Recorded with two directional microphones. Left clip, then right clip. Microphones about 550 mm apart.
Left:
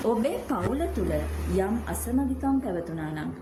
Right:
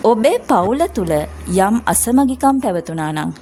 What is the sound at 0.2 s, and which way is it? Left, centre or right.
A woman's voice, centre.